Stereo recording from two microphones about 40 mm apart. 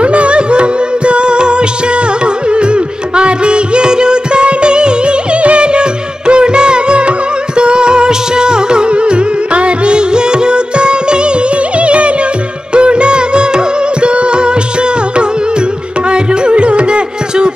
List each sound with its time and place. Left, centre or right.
0.0 s music: right